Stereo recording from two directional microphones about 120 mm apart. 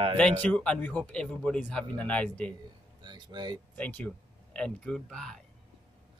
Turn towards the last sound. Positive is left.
turn(degrees=5)  # may be behind; listen again after turning